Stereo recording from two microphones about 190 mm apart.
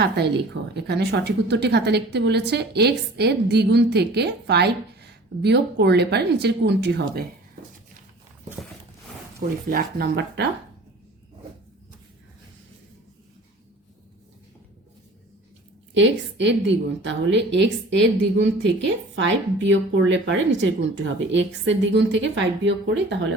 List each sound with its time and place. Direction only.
0.2 s a woman's voice: 60° right (ahead or behind)
9.6 s a woman's voice: 50° right (ahead or behind)
16.0 s a woman's voice: 70° right (ahead or behind)